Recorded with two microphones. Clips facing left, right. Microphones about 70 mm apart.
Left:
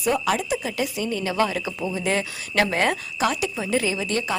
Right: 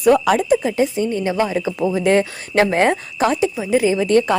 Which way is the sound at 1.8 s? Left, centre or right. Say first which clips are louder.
Right 11 dB; right.